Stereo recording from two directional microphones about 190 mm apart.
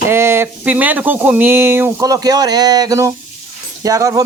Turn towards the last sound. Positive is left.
turn(degrees=-15)  # may be behind; listen again after turning